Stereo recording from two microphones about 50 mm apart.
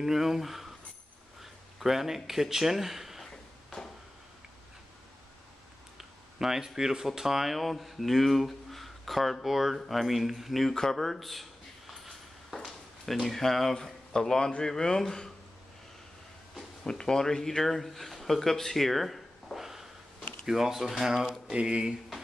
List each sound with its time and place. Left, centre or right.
0.0 s speech: centre
5.9 s speech: centre
10.7 s speech: centre
11.9 s a sound: centre
14.7 s speech: centre
16.8 s speech: centre
21.5 s speech: centre